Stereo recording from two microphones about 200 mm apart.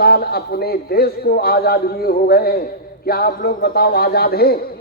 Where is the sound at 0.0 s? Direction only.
50° left (ahead or behind).